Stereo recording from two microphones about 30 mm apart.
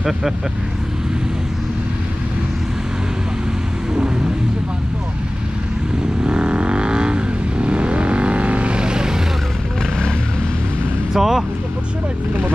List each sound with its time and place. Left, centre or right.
6.2 s vehicle: right
11.1 s speech: centre